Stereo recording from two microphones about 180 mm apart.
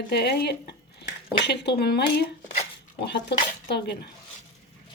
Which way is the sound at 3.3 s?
70° left (ahead or behind).